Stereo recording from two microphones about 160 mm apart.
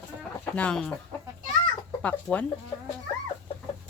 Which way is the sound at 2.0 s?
10° left (ahead or behind).